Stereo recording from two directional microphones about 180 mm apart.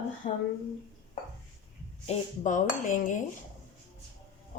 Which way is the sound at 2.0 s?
40° left (ahead or behind).